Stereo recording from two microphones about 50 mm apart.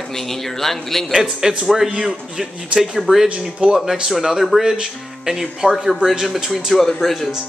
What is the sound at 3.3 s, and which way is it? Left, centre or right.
Speech, right.